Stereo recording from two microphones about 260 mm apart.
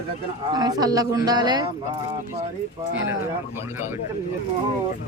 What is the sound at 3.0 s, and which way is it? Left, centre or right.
Speech, centre.